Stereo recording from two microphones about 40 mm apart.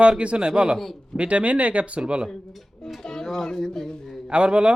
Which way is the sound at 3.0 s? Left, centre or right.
Centre.